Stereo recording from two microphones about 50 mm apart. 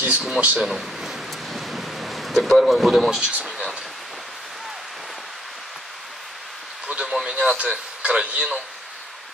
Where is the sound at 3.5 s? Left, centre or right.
Centre.